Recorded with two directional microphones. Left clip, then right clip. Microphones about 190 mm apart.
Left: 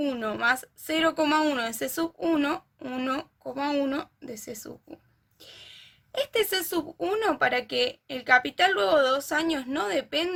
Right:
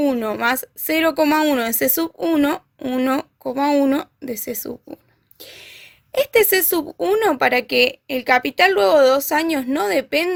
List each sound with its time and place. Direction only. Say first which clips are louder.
0.0 s speech: right 7 dB; 40° right (ahead or behind)